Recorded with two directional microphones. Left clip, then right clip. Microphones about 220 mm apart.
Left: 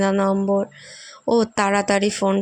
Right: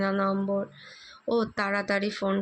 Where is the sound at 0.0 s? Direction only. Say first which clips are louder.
Left 7 dB; 45° left (ahead or behind).